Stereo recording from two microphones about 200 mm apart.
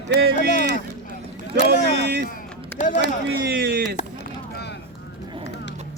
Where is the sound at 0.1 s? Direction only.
55° right (ahead or behind).